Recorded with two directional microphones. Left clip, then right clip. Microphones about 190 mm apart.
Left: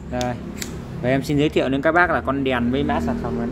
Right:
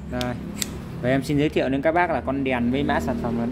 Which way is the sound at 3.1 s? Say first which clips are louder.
Left 1 dB; 20° right (ahead or behind).